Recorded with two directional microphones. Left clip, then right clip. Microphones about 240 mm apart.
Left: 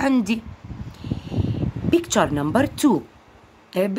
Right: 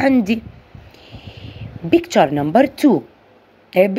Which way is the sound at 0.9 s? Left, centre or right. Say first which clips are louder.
Left 8 dB; left.